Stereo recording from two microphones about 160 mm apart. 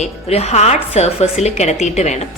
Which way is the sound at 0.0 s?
40° left (ahead or behind).